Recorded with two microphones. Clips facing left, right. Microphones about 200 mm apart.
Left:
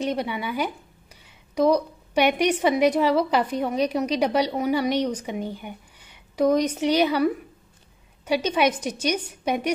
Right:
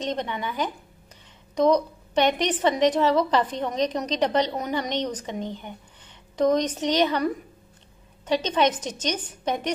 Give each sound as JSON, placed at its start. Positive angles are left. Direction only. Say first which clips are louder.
{"t": 0.0, "sound": "a woman's voice", "louder": "left 2 dB", "side_deg": 10}